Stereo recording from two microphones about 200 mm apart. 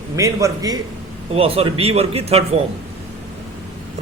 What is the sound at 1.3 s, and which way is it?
A man's voice, 30° right (ahead or behind).